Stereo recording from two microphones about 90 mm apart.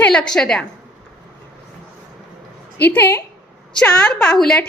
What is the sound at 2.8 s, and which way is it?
Speech, 20° left (ahead or behind).